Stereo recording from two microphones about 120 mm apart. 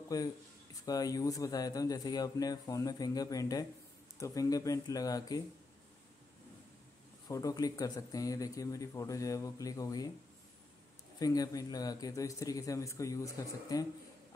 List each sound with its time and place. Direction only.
0.1 s speech: 30° left (ahead or behind)
7.2 s speech: 30° left (ahead or behind)
11.1 s speech: 30° left (ahead or behind)